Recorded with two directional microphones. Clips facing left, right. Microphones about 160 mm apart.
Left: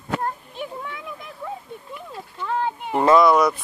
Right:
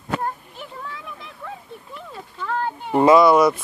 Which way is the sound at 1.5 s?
10° left (ahead or behind).